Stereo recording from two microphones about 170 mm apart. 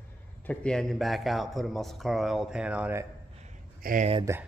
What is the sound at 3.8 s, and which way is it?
Speech, 55° right (ahead or behind).